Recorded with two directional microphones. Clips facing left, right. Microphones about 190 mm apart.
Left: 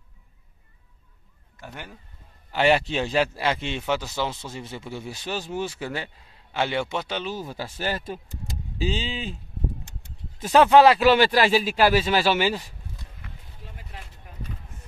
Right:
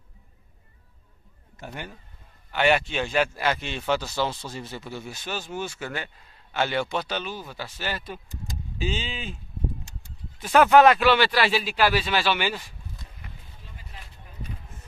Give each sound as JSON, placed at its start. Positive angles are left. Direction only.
{"t": 1.7, "sound": "speech", "side_deg": 0}
{"t": 2.5, "sound": "speech", "side_deg": 30}
{"t": 7.3, "sound": "a man's voice", "side_deg": 40}
{"t": 10.5, "sound": "a man's voice", "side_deg": 30}